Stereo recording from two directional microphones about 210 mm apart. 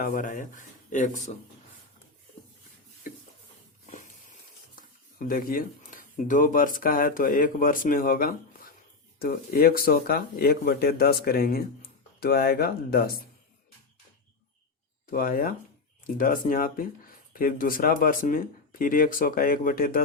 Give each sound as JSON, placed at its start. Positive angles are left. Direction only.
{"t": 0.0, "sound": "speech", "side_deg": 40}
{"t": 3.1, "sound": "a sound", "side_deg": 40}
{"t": 4.7, "sound": "speech", "side_deg": 40}
{"t": 15.1, "sound": "speech", "side_deg": 40}